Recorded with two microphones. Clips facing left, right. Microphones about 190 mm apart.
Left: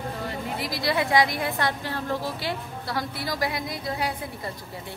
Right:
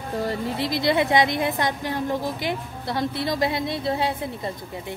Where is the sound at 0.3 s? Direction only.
25° right (ahead or behind).